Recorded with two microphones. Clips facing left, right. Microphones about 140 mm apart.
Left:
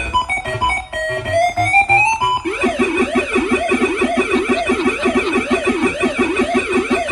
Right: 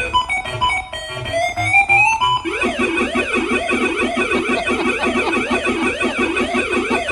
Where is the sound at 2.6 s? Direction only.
35° left (ahead or behind).